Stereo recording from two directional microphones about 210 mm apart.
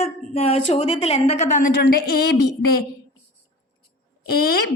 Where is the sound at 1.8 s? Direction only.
50° left (ahead or behind).